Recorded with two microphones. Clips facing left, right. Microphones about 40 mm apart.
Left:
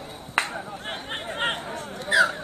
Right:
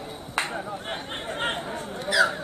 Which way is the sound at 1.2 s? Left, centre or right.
Centre.